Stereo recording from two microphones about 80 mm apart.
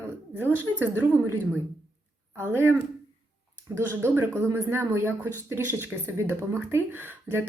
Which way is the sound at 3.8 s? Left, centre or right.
Right.